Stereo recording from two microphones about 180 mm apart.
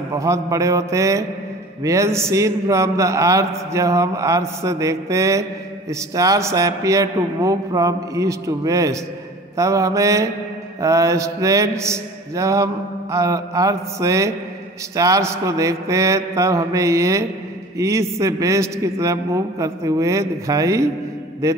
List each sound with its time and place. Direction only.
0.1 s a man's voice: 15° right (ahead or behind)